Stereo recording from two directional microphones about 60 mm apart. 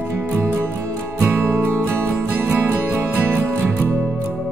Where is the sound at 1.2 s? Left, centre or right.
Right.